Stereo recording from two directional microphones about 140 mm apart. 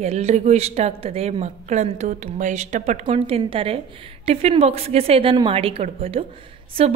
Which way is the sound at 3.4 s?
40° right (ahead or behind).